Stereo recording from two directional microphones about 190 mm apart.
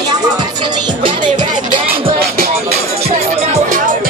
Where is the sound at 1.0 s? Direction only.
25° right (ahead or behind).